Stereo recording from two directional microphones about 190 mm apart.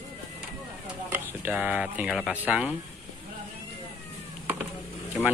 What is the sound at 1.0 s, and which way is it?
Speech, 10° right (ahead or behind).